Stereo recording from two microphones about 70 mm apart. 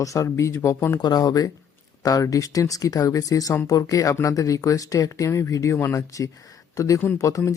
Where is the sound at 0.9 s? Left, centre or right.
Left.